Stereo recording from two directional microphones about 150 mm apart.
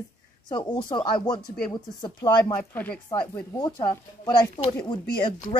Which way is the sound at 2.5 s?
10° left (ahead or behind).